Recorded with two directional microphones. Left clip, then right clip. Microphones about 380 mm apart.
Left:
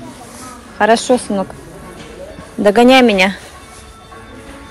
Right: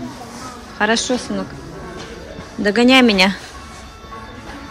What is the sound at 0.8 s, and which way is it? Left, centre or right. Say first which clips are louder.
Speech: left 6 dB; centre.